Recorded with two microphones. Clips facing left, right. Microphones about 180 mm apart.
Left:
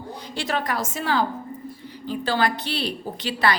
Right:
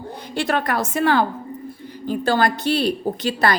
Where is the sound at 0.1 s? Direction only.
55° right (ahead or behind).